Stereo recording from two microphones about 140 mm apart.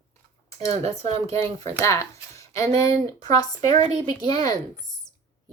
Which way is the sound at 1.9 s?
20° left (ahead or behind).